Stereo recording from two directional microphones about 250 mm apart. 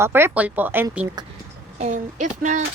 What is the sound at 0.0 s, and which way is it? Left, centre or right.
Speech, centre.